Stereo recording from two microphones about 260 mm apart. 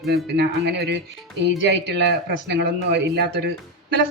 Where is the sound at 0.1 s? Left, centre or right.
Right.